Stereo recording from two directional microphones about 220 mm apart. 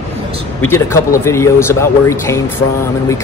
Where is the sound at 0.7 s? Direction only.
10° left (ahead or behind).